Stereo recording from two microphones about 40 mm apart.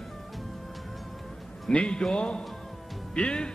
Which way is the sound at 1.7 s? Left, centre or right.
Left.